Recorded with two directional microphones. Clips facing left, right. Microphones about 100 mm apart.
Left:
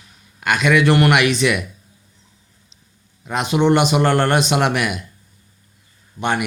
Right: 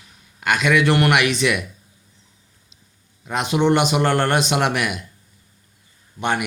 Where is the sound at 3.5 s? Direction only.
35° left (ahead or behind).